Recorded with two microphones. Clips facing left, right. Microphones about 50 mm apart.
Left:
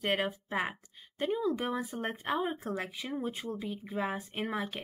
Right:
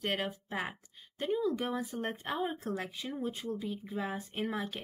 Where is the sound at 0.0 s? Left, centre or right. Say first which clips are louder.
Left 3 dB; centre.